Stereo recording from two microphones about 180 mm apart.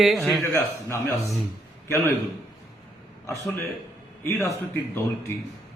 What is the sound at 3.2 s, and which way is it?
Speech, 15° left (ahead or behind).